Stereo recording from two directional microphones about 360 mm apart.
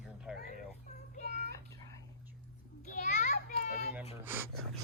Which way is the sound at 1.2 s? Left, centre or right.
Right.